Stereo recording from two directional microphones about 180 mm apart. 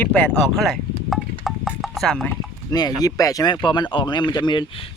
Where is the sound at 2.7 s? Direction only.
20° left (ahead or behind).